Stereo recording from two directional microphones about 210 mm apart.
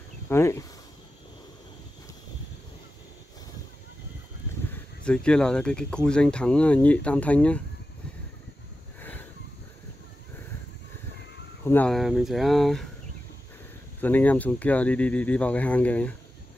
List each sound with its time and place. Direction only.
0.3 s speech: 15° left (ahead or behind)
4.6 s speech: 5° left (ahead or behind)
9.0 s a sound: 10° left (ahead or behind)
11.6 s speech: 10° left (ahead or behind)
14.0 s speech: 10° left (ahead or behind)